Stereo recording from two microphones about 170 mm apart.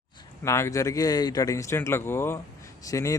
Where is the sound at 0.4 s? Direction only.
15° left (ahead or behind).